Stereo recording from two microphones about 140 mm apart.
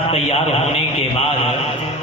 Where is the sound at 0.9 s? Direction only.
50° left (ahead or behind).